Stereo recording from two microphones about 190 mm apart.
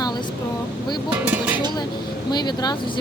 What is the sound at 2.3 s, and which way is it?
Speech, 20° left (ahead or behind).